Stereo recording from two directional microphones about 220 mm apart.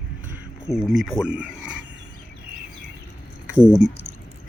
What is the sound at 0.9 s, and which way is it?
Speech, centre (ahead or behind).